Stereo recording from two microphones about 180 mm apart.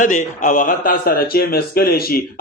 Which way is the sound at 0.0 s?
45° left (ahead or behind).